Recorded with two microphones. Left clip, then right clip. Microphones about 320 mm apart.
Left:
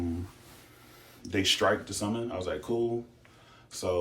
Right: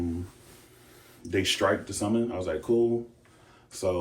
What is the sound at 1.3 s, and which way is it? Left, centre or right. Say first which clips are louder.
Speech: right 1 dB; centre.